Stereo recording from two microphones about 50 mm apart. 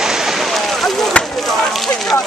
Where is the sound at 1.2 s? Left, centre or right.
Left.